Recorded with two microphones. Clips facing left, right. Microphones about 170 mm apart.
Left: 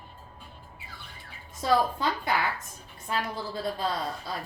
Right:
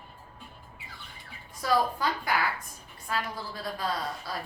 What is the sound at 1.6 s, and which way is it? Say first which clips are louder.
A woman's voice: left 2 dB; 25° left (ahead or behind).